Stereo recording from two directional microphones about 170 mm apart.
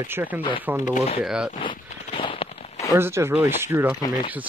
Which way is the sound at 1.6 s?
30° left (ahead or behind).